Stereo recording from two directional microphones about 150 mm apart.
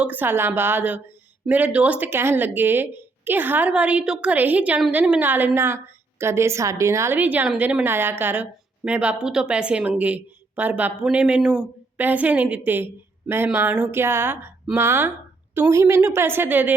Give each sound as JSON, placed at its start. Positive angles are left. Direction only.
{"t": 0.0, "sound": "a woman's voice", "side_deg": -10}